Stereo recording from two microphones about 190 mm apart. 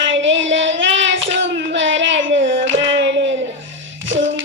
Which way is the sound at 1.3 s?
75° right (ahead or behind).